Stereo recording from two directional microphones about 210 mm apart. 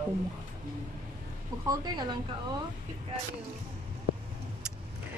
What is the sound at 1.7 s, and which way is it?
Speech, 20° right (ahead or behind).